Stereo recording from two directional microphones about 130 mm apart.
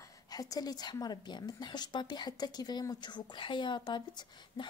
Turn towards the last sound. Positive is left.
turn(degrees=40)  # may be behind; listen again after turning